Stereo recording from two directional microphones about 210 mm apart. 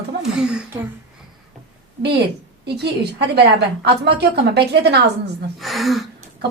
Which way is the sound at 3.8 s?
50° right (ahead or behind).